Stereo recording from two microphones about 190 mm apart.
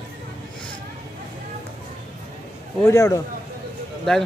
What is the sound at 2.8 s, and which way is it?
Speech, 15° left (ahead or behind).